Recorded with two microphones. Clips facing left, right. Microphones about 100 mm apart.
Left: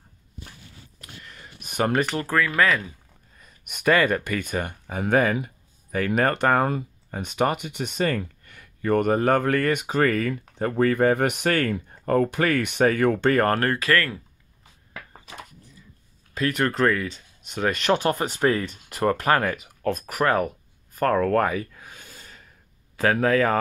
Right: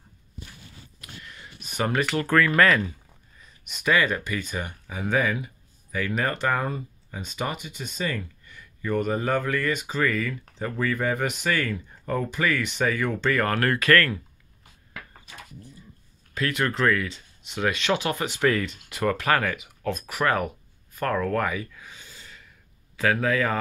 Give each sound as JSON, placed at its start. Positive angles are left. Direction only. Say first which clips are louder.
{"t": 1.2, "sound": "a sound", "louder": "even", "side_deg": 40}
{"t": 2.2, "sound": "speech", "louder": "right 5 dB", "side_deg": 10}
{"t": 3.3, "sound": "speech", "louder": "left 1 dB", "side_deg": 50}
{"t": 13.6, "sound": "speech", "louder": "right 1 dB", "side_deg": 25}
{"t": 16.3, "sound": "speech", "louder": "left 3 dB", "side_deg": 35}